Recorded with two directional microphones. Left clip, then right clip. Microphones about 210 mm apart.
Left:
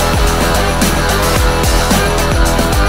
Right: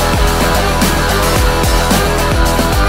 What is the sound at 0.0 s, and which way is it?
Music, centre (ahead or behind).